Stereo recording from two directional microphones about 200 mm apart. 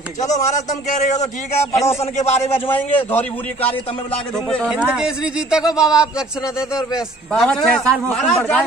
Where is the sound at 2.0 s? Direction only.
35° left (ahead or behind).